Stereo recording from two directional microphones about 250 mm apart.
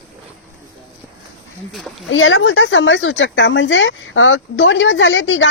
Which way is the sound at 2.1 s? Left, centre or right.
Left.